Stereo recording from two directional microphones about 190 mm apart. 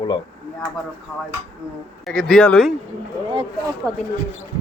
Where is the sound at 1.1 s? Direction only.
10° left (ahead or behind).